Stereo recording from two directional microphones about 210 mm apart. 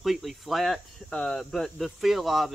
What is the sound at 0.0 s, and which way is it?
Speech, centre (ahead or behind).